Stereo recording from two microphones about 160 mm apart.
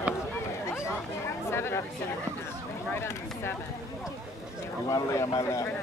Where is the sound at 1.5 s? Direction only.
15° left (ahead or behind).